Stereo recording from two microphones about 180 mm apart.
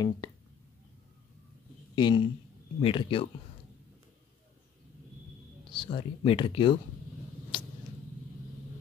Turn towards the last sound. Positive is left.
turn(degrees=30)  # may be behind; listen again after turning